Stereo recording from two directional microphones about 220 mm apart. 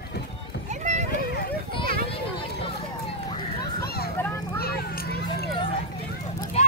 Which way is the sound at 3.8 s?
45° left (ahead or behind).